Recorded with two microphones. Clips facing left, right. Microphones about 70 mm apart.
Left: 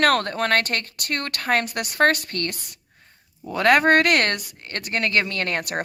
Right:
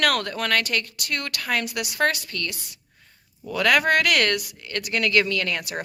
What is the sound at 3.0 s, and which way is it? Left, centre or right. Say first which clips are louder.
Speech: left 1 dB; left.